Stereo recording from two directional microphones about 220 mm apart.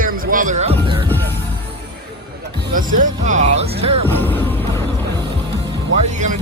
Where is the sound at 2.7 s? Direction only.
40° right (ahead or behind).